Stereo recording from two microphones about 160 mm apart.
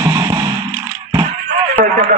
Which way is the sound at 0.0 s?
20° right (ahead or behind).